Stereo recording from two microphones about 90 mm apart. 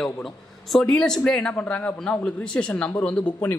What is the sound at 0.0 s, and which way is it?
Speech, 5° left (ahead or behind).